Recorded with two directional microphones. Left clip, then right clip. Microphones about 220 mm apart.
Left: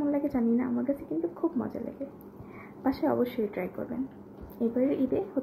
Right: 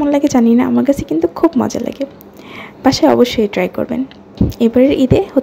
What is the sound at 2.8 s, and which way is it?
Speech, 45° right (ahead or behind).